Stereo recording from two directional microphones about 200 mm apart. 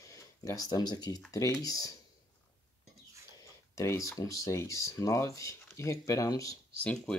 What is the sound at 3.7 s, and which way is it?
Speech, 15° left (ahead or behind).